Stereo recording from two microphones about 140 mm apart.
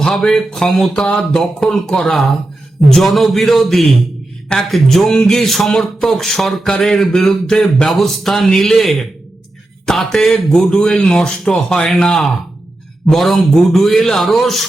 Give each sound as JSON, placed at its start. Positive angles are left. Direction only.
{"t": 0.0, "sound": "speech", "side_deg": 0}